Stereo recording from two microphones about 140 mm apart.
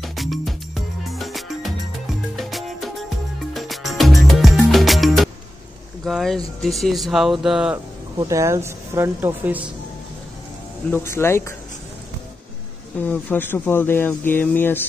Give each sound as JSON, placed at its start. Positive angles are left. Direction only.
{"t": 0.0, "sound": "music", "side_deg": 0}
{"t": 6.0, "sound": "speech", "side_deg": 0}
{"t": 8.2, "sound": "speech", "side_deg": -20}
{"t": 10.9, "sound": "speech", "side_deg": 15}
{"t": 13.0, "sound": "speech", "side_deg": 15}